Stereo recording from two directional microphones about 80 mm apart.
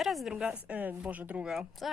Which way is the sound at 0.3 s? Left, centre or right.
Centre.